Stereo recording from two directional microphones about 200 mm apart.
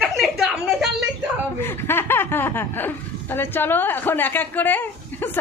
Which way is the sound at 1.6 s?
10° left (ahead or behind).